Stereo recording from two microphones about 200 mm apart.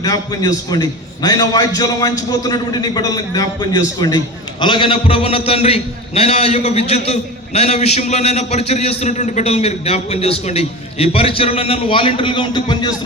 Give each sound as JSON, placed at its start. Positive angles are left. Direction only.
{"t": 0.0, "sound": "a man's voice", "side_deg": 20}